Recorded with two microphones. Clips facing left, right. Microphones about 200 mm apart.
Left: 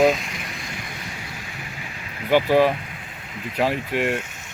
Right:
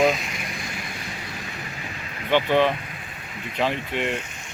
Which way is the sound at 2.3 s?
10° left (ahead or behind).